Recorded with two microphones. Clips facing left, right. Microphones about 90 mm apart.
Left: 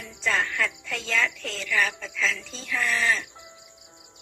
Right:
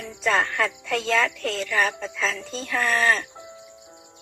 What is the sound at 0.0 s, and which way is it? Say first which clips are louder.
Speech: right 4 dB; 45° right (ahead or behind).